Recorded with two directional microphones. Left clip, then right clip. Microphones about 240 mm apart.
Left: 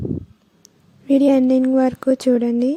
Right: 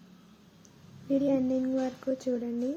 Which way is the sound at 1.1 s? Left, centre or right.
Left.